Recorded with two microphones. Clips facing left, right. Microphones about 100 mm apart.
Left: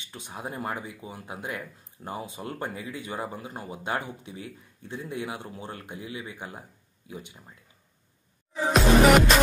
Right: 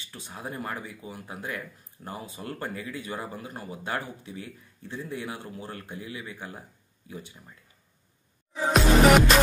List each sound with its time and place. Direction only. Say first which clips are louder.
0.1 s speech: left 1 dB; 20° left (ahead or behind)
8.7 s music: left 1 dB; centre (ahead or behind)